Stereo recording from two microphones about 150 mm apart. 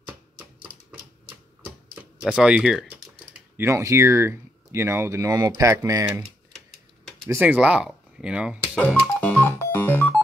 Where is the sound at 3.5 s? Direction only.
20° right (ahead or behind).